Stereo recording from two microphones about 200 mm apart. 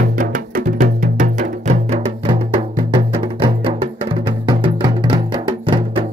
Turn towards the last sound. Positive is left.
turn(degrees=-25)  # may be behind; listen again after turning